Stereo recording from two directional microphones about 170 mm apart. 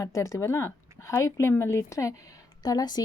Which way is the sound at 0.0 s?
20° left (ahead or behind).